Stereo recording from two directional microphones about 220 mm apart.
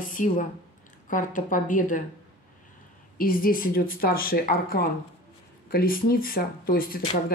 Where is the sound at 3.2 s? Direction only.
40° left (ahead or behind).